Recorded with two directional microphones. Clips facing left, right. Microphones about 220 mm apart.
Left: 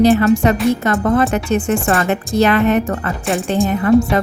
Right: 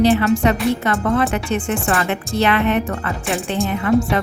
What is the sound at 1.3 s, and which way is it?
Speech, 40° left (ahead or behind).